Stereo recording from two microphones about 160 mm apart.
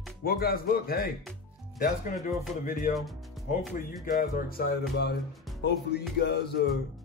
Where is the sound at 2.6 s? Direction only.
55° left (ahead or behind).